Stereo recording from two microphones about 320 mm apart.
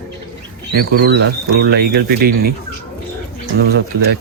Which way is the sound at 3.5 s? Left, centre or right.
Right.